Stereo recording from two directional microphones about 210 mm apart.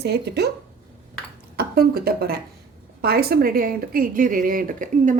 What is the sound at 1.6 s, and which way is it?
Speech, 45° right (ahead or behind).